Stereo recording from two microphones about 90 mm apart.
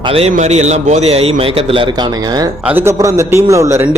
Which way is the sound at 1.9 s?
50° right (ahead or behind).